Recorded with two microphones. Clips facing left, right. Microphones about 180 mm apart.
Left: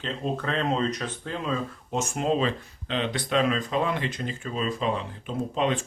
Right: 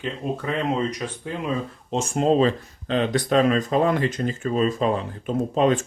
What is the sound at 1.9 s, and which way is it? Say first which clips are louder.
Speech: right 6 dB; 30° right (ahead or behind).